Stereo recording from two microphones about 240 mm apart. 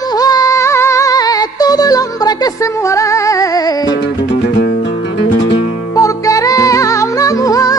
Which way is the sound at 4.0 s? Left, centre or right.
Left.